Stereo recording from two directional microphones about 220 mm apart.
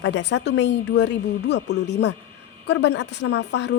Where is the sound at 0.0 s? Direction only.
50° left (ahead or behind).